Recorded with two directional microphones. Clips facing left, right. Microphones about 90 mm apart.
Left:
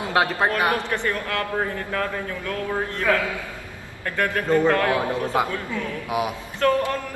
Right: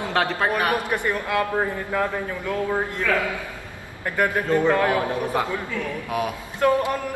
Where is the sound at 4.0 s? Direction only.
15° right (ahead or behind).